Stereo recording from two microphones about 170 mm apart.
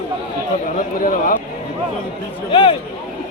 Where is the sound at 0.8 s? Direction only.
55° left (ahead or behind).